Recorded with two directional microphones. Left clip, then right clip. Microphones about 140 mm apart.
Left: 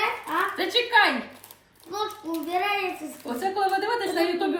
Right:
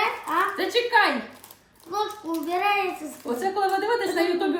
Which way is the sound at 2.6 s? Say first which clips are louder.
Right 5 dB; 20° right (ahead or behind).